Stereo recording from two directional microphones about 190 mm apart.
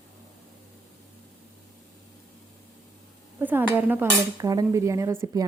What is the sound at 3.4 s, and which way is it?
Dishes, 10° right (ahead or behind).